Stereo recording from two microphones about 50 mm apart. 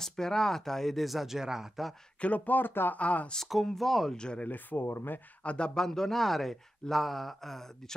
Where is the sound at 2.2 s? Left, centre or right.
Left.